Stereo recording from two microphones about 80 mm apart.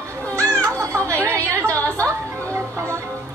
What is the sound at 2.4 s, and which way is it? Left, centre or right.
Music, right.